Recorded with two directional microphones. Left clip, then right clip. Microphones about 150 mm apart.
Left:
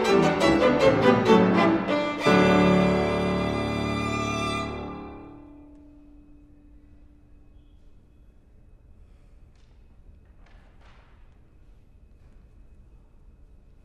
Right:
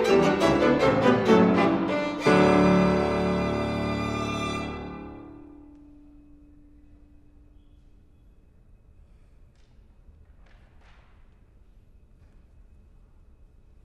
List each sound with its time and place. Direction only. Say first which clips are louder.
0.2 s music: left 1 dB; 10° left (ahead or behind)
2.3 s music: even; 20° right (ahead or behind)
3.4 s music: even; 10° left (ahead or behind)